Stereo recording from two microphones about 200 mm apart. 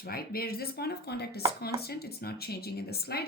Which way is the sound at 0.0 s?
50° left (ahead or behind).